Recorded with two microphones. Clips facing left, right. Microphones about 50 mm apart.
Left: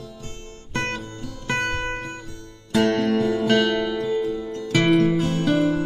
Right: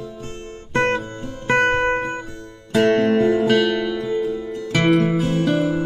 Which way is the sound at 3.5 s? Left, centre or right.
Centre.